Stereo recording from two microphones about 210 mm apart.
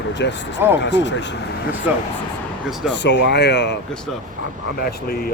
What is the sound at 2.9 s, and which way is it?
Speech, 55° left (ahead or behind).